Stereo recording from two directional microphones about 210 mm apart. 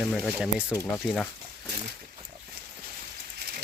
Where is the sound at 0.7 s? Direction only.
10° left (ahead or behind).